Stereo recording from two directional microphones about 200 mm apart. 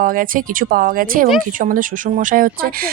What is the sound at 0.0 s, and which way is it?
Speech, 45° right (ahead or behind).